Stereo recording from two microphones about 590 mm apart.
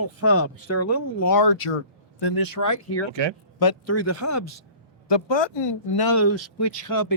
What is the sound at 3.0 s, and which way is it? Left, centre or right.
Speech, right.